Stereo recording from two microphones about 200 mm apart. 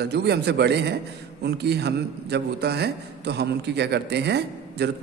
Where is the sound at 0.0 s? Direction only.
55° right (ahead or behind).